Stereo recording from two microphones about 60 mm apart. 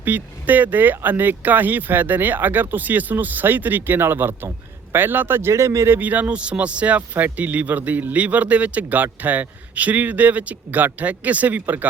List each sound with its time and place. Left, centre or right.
0.0 s speech: right
6.0 s speech: right